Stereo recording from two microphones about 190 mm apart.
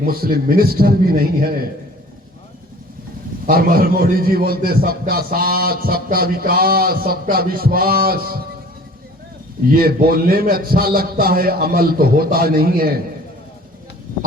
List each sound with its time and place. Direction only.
0.0 s a man's voice: 50° right (ahead or behind)
3.4 s a man's voice: 50° right (ahead or behind)
9.7 s a man's voice: 50° right (ahead or behind)